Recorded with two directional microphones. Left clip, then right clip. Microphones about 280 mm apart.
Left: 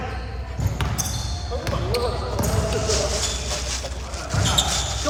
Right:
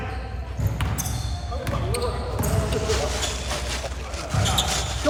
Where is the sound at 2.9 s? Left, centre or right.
Right.